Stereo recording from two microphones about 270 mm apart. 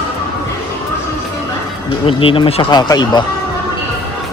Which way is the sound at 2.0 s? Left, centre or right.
Centre.